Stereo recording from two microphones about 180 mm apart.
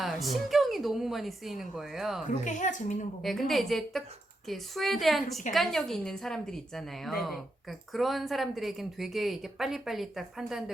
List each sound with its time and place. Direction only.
0.0 s a woman's voice: centre (ahead or behind)
2.2 s a woman's voice: 45° left (ahead or behind)
3.2 s a woman's voice: centre (ahead or behind)